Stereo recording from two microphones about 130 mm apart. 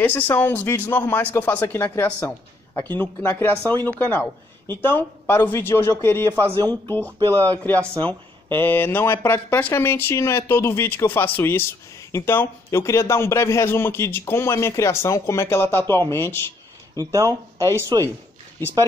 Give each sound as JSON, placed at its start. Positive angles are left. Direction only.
{"t": 0.0, "sound": "speech", "side_deg": 15}
{"t": 7.2, "sound": "speech", "side_deg": -35}
{"t": 7.5, "sound": "a man's voice", "side_deg": 15}
{"t": 16.9, "sound": "speech", "side_deg": -25}